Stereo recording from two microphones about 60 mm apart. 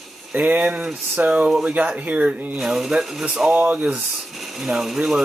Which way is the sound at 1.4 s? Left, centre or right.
Centre.